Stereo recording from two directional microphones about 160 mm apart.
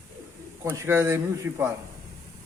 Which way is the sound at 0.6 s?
15° right (ahead or behind).